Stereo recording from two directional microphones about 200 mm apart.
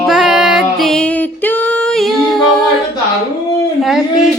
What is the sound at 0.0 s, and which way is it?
Music, centre (ahead or behind).